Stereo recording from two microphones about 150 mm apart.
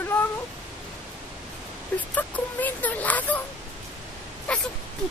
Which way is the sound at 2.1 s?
10° left (ahead or behind).